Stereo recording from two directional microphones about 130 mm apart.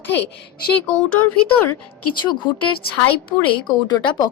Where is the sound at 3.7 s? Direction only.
35° left (ahead or behind).